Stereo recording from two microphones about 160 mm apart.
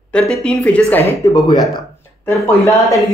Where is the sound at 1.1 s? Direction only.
20° left (ahead or behind).